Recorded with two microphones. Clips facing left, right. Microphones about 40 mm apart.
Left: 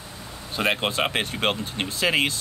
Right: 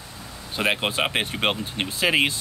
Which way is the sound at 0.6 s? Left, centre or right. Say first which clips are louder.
Even; centre.